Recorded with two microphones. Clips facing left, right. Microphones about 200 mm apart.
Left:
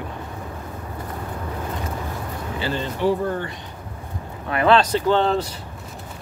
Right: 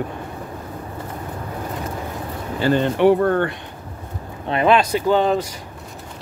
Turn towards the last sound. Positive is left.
turn(degrees=-10)  # may be behind; listen again after turning